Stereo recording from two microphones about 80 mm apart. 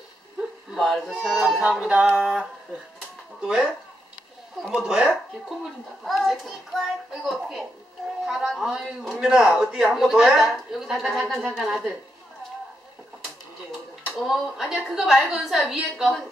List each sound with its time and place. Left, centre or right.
0.7 s a man's voice: centre
3.3 s a man's voice: centre
8.3 s a man's voice: centre
14.1 s a man's voice: centre